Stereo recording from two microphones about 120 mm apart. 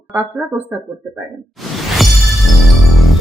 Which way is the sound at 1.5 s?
Centre (ahead or behind).